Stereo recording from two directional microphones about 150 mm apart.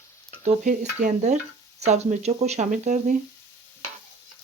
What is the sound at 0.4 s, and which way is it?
Speech, 55° right (ahead or behind).